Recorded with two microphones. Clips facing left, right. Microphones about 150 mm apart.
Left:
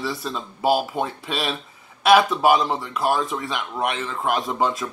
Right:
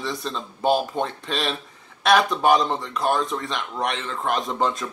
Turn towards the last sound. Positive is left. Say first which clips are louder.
# left 1 dB
turn(degrees=5)  # may be behind; listen again after turning